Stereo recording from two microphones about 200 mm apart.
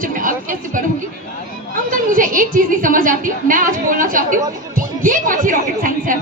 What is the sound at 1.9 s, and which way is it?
Speech, 45° right (ahead or behind).